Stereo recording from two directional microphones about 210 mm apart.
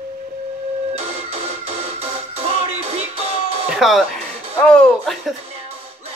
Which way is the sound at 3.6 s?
Centre (ahead or behind).